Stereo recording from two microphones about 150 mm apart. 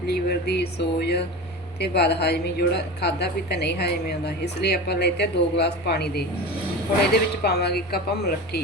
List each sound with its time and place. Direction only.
0.1 s a woman's voice: 90° left